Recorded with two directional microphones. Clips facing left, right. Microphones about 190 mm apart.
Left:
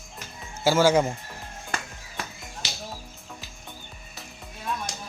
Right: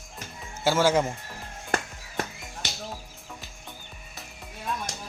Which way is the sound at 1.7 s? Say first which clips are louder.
Right 6 dB; 55° right (ahead or behind).